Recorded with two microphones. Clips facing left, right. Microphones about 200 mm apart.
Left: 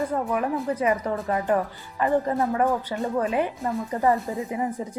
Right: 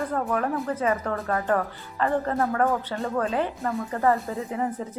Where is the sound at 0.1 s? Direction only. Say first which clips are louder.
Left 1 dB; 10° left (ahead or behind).